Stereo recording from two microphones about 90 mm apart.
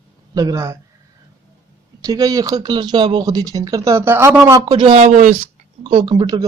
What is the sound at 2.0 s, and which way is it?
Speech, 40° right (ahead or behind).